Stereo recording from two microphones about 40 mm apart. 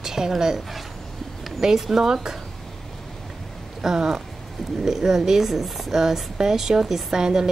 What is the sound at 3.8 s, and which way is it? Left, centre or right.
Speech, centre.